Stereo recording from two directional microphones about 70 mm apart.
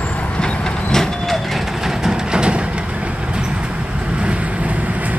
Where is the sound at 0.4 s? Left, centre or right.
Centre.